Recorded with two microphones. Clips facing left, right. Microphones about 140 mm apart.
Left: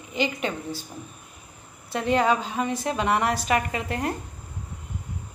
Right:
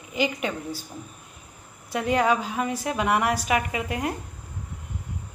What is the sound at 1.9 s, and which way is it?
A woman's voice, 10° right (ahead or behind).